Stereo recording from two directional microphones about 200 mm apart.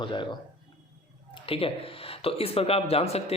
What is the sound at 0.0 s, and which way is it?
Speech, 25° left (ahead or behind).